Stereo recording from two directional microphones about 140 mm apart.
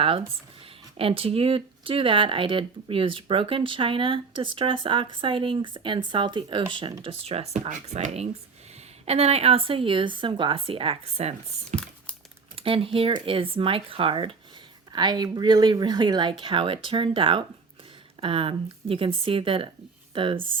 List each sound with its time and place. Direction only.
0.0 s speech: 40° right (ahead or behind)